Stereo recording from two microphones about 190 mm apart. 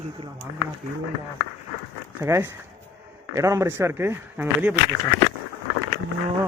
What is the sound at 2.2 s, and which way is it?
Speech, 15° right (ahead or behind).